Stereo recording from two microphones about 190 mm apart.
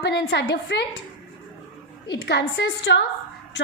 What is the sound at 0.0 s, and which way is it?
Speech, 60° left (ahead or behind).